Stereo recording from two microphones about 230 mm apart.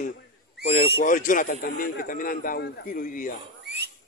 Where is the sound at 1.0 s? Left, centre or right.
Left.